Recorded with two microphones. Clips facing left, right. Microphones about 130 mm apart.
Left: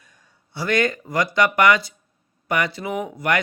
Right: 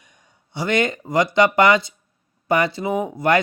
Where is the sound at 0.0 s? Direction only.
20° right (ahead or behind).